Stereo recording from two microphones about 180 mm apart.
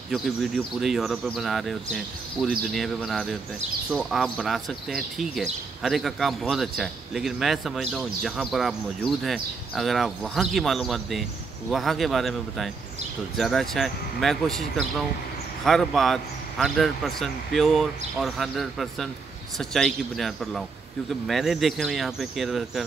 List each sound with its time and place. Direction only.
0.1 s speech: centre (ahead or behind)